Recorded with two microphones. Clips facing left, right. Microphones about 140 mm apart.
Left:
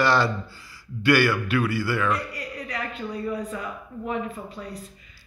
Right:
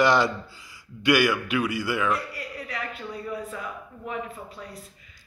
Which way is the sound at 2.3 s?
5° right (ahead or behind).